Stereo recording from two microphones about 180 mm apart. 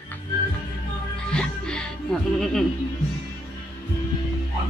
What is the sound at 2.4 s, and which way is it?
Speech, centre (ahead or behind).